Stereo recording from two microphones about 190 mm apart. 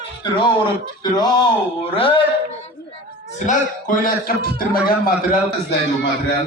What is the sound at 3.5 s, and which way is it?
A man's voice, 45° left (ahead or behind).